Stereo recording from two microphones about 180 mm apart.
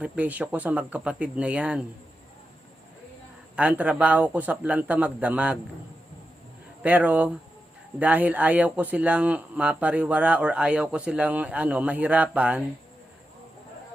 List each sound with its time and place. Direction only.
0.0 s speech: 10° right (ahead or behind)
3.5 s speech: 10° right (ahead or behind)
6.8 s speech: 10° right (ahead or behind)